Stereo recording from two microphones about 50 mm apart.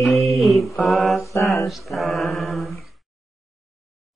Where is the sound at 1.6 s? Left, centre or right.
Centre.